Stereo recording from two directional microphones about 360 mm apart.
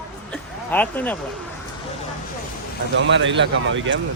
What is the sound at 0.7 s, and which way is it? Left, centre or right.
Speech, centre.